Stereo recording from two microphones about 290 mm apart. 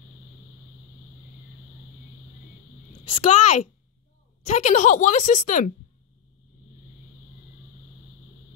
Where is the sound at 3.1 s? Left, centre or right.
Left.